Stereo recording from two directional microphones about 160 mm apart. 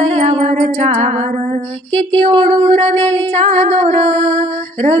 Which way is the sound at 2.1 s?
35° right (ahead or behind).